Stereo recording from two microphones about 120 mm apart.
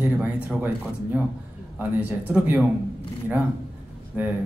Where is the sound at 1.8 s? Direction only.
15° right (ahead or behind).